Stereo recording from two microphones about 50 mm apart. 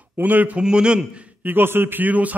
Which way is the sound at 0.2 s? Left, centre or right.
Right.